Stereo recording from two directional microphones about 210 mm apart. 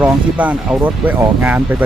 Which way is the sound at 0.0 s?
10° right (ahead or behind).